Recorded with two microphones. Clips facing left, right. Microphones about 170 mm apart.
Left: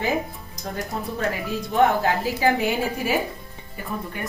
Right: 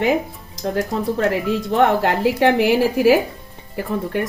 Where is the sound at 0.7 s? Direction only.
90° right.